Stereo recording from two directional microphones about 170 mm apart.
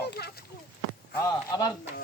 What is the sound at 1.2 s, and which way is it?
Speech, 25° left (ahead or behind).